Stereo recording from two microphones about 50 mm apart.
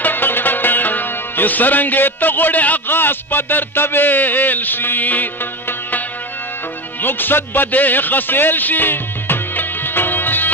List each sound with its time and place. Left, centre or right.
0.0 s music: left